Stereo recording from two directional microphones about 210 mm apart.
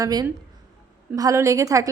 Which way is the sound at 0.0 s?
20° right (ahead or behind).